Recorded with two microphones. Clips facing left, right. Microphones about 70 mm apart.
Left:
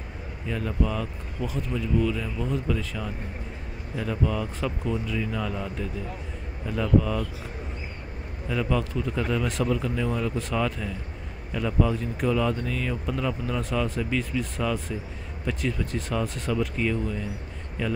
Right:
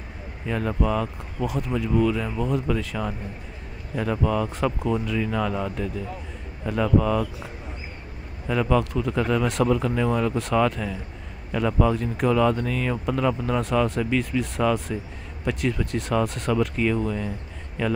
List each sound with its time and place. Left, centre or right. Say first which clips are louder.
0.5 s speech: right 4 dB; right
6.8 s speech: right 3 dB; right
8.5 s speech: right 5 dB; right